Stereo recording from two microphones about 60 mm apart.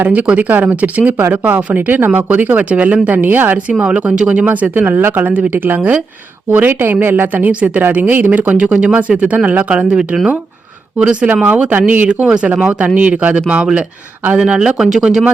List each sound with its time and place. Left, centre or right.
0.0 s speech: right
3.7 s speech: right
14.8 s speech: centre